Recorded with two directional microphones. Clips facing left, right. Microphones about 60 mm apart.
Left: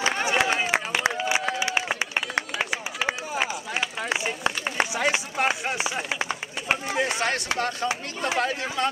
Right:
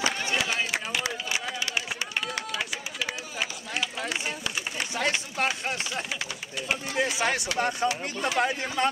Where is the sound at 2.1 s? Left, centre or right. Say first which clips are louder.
Left 4 dB; left.